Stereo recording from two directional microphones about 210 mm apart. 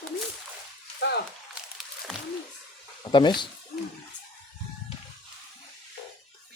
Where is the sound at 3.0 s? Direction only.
20° left (ahead or behind).